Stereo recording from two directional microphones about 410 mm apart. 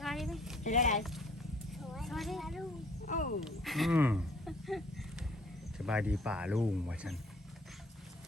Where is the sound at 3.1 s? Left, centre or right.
Centre.